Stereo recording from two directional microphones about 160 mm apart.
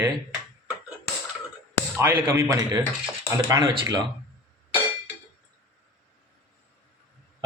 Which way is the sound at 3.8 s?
25° right (ahead or behind).